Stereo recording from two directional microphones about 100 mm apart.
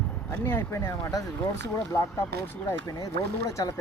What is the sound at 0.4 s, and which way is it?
Speech, 25° left (ahead or behind).